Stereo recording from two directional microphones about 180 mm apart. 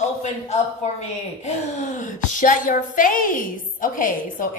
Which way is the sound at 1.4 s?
40° left (ahead or behind).